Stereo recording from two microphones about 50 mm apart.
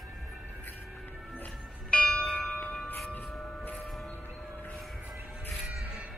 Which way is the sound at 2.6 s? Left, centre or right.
Centre.